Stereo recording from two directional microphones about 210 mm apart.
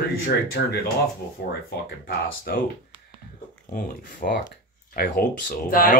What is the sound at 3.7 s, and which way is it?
Speech, 40° left (ahead or behind).